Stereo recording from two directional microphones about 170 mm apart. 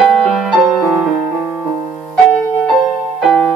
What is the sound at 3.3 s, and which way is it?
Music, centre (ahead or behind).